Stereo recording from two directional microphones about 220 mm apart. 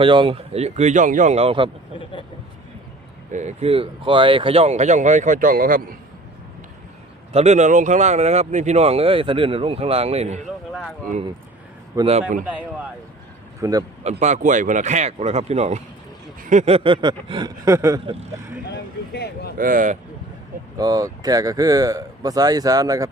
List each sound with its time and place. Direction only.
0.0 s speech: 20° right (ahead or behind)
3.3 s speech: 30° right (ahead or behind)
7.3 s speech: 30° right (ahead or behind)
10.7 s speech: centre (ahead or behind)
11.9 s speech: 25° right (ahead or behind)
12.5 s speech: 5° right (ahead or behind)
14.0 s speech: 30° right (ahead or behind); by 18.0 s 15° right (ahead or behind)
18.0 s speech: 25° right (ahead or behind)
18.7 s speech: 45° left (ahead or behind)
19.5 s speech: 40° right (ahead or behind)
20.7 s speech: 15° right (ahead or behind)